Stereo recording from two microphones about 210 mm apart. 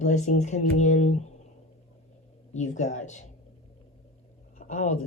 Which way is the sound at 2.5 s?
35° left (ahead or behind).